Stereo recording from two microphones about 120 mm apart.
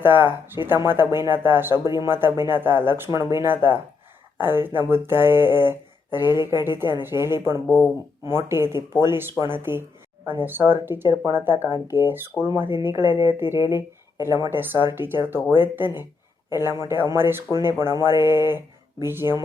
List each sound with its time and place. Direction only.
0.0 s speech: 20° right (ahead or behind)
6.4 s a woman's voice: 35° left (ahead or behind)
6.7 s speech: 20° right (ahead or behind)